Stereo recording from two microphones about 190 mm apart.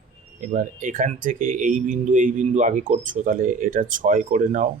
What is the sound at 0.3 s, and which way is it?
Speech, 40° right (ahead or behind).